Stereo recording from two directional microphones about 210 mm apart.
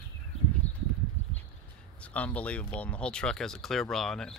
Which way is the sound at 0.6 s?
30° left (ahead or behind).